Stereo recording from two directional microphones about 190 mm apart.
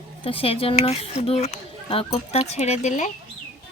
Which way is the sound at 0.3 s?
30° left (ahead or behind).